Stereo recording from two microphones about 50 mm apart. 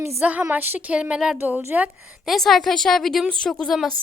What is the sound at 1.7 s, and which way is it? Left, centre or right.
Speech, right.